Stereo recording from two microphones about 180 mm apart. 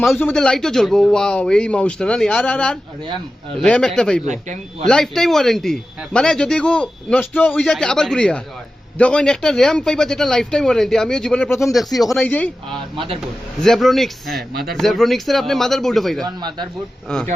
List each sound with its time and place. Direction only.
0.2 s speech: 5° left (ahead or behind)
4.3 s speech: 40° right (ahead or behind)
4.9 s speech: 5° left (ahead or behind)
16.2 s speech: 25° right (ahead or behind)
17.1 s speech: 5° left (ahead or behind)